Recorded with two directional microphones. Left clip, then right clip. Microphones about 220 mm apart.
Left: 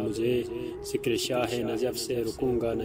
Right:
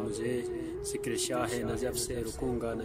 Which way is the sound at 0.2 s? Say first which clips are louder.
Left 5 dB; 10° left (ahead or behind).